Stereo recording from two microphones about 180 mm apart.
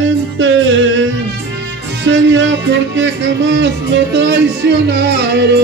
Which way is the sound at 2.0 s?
90° right.